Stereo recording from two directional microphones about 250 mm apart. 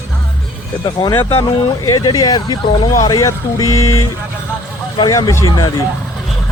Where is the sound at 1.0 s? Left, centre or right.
Centre.